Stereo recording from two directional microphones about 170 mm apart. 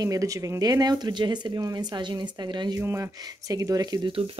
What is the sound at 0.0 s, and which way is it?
Speech, 20° right (ahead or behind).